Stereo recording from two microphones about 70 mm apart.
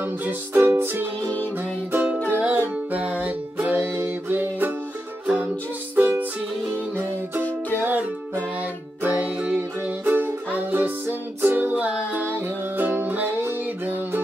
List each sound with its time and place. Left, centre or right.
0.0 s music: right
1.2 s music: left
1.6 s music: right
5.9 s music: right
7.8 s music: right